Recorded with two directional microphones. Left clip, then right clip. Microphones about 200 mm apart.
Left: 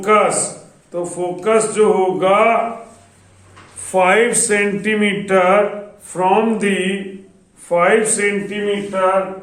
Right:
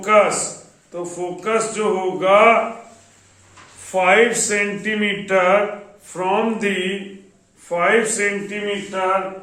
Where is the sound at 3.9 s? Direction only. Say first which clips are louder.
Left 1 dB; 25° left (ahead or behind).